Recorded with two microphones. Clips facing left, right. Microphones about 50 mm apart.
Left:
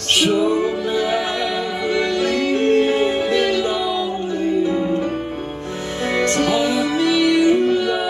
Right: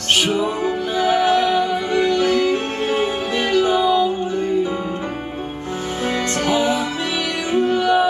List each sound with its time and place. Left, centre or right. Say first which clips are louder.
0.2 s music: left 2 dB; right
6.5 s music: left 1 dB; right